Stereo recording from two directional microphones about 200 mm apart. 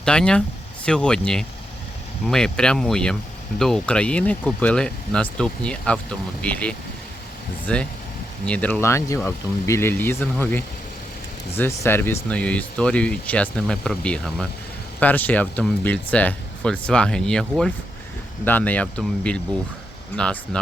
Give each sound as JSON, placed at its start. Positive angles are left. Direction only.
{"t": 0.0, "sound": "speech", "side_deg": 5}